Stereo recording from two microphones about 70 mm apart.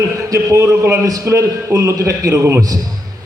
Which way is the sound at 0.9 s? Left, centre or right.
Right.